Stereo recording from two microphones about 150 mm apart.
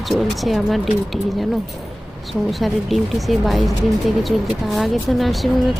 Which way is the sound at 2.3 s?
Centre (ahead or behind).